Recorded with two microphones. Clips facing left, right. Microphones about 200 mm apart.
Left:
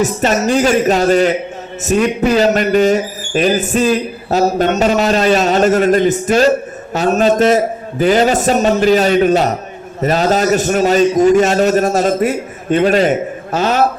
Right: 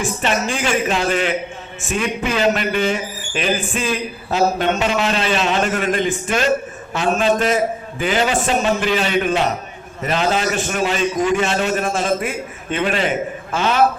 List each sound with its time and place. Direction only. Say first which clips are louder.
0.0 s a man's voice: left 6 dB; 40° left (ahead or behind)